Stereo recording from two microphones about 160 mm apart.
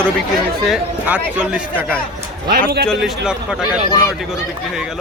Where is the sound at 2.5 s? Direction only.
75° right (ahead or behind).